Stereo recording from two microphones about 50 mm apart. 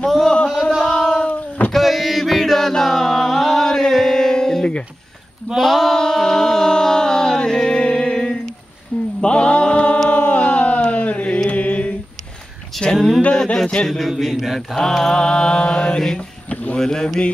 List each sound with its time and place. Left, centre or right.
0.0 s music: centre
0.8 s a sound: centre
1.7 s chant: centre
5.6 s mantra: centre; by 9.9 s left
10.0 s a sound: left
10.8 s chant: left
12.7 s a sound: centre
13.8 s a man's voice: centre
14.8 s mantra: centre